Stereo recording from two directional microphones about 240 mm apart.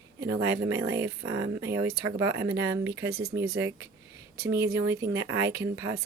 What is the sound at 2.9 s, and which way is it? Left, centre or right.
Speech, right.